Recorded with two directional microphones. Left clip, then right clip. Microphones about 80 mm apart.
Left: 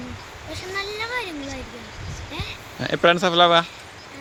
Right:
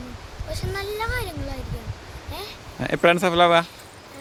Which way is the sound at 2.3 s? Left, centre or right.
Right.